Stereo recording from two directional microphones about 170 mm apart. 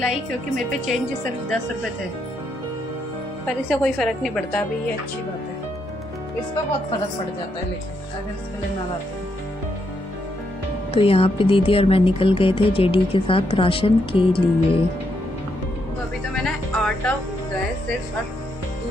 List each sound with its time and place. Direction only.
3.4 s a woman's voice: 5° left (ahead or behind)
10.9 s speech: 35° left (ahead or behind)
16.3 s music: 5° left (ahead or behind)